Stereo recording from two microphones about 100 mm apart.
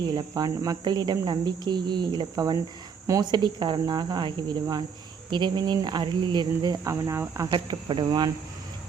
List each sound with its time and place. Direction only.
0.0 s speech: 45° right (ahead or behind)
6.8 s speech: 30° right (ahead or behind)
7.4 s speech: 50° right (ahead or behind)